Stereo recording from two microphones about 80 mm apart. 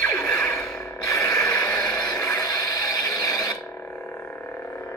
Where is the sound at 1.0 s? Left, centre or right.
Left.